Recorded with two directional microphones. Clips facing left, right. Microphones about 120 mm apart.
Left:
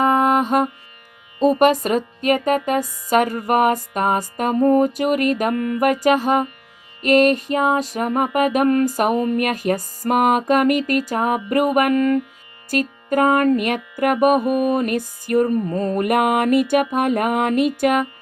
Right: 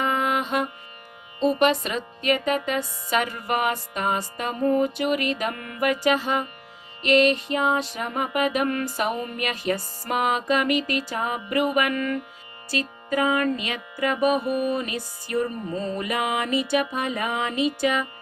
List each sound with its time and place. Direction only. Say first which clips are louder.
0.0 s music: left 8 dB; 45° left (ahead or behind)